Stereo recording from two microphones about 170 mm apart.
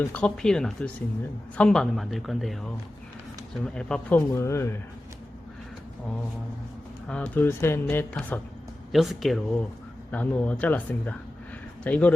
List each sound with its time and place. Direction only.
0.0 s speech: 10° left (ahead or behind)
3.8 s speech: 5° left (ahead or behind)
4.3 s speech: 15° left (ahead or behind)
7.1 s speech: 10° left (ahead or behind)
8.9 s speech: centre (ahead or behind)